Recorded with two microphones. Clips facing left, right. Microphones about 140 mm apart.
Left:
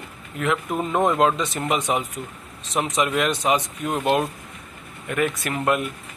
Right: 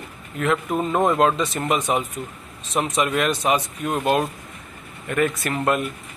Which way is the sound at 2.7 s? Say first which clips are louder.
Right 1 dB; 15° left (ahead or behind).